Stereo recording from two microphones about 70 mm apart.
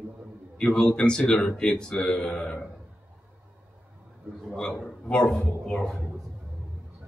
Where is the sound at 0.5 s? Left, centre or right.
Centre.